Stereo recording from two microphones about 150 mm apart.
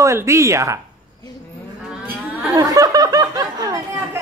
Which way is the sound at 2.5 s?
25° right (ahead or behind).